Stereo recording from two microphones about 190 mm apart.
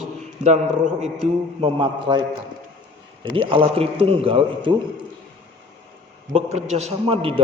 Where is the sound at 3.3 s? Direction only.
30° right (ahead or behind).